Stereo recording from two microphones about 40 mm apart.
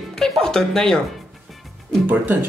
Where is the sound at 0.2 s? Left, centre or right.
Centre.